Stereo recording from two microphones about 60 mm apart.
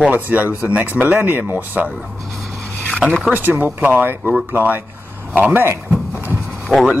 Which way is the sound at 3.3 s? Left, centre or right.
Right.